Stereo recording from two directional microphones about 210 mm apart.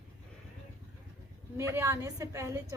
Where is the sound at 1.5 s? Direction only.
15° right (ahead or behind).